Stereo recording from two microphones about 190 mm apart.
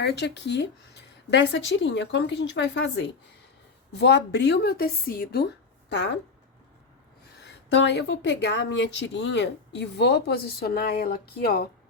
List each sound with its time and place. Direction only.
0.0 s speech: 60° left (ahead or behind)
5.9 s speech: 65° left (ahead or behind)
7.7 s speech: 70° left (ahead or behind)